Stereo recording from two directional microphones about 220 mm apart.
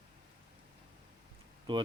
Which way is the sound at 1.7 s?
25° right (ahead or behind).